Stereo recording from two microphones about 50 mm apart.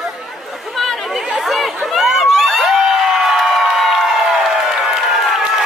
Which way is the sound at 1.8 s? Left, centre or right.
Centre.